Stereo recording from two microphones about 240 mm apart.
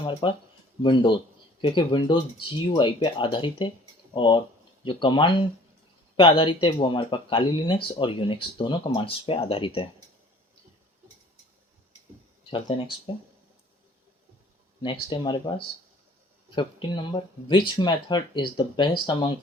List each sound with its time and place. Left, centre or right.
0.0 s speech: left
12.5 s speech: left
15.1 s speech: left